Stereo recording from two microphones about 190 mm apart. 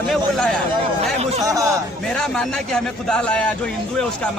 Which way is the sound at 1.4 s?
15° right (ahead or behind).